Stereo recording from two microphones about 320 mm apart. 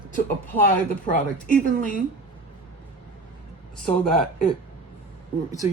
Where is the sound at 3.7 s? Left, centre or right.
Centre.